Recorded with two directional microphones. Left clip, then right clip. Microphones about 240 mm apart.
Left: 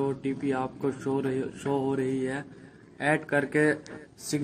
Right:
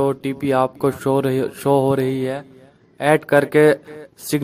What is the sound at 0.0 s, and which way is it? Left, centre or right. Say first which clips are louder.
A man's voice: right 9 dB; right.